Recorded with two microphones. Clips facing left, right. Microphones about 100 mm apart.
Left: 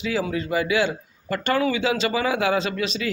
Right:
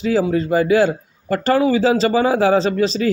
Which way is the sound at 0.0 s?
35° right (ahead or behind).